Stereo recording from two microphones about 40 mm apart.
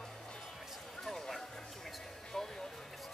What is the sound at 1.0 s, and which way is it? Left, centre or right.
Music, centre.